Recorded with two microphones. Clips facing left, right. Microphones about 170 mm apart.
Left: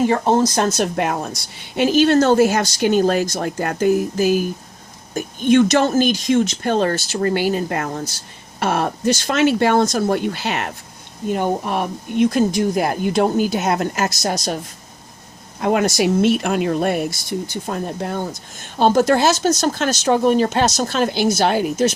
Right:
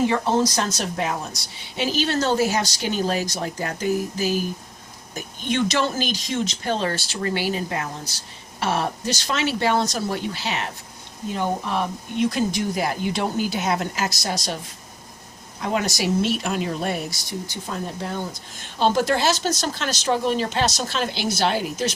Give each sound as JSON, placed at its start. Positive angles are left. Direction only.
{"t": 0.1, "sound": "a woman's voice", "side_deg": 50}
{"t": 15.6, "sound": "a woman's voice", "side_deg": 55}